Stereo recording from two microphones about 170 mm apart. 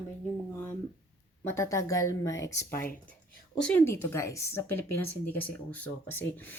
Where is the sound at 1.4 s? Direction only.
15° left (ahead or behind).